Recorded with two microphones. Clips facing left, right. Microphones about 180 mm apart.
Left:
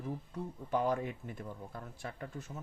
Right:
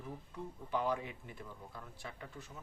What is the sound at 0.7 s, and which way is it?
Speech, 45° left (ahead or behind).